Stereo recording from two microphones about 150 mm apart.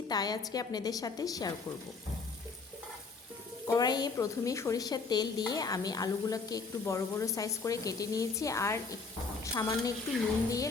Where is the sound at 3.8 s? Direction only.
25° left (ahead or behind).